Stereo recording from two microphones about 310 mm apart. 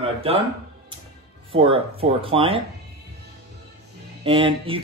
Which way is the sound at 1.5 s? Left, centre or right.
Centre.